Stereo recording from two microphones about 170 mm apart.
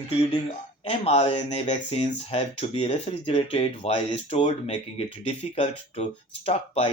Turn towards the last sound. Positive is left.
turn(degrees=35)  # may be behind; listen again after turning